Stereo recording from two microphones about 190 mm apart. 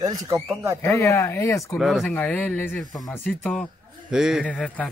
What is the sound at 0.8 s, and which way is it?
Speech, 15° left (ahead or behind).